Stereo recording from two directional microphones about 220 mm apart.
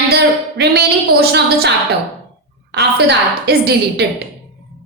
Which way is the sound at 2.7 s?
50° right (ahead or behind).